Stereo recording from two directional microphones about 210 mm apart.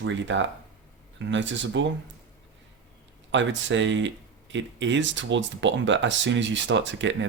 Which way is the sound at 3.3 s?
60° right (ahead or behind).